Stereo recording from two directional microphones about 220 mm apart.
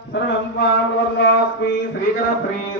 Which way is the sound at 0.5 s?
50° left (ahead or behind).